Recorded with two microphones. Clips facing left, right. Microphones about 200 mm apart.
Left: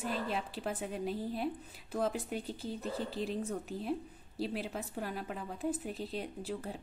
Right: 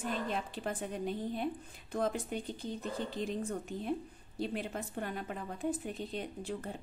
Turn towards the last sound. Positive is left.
turn(degrees=5)  # may be behind; listen again after turning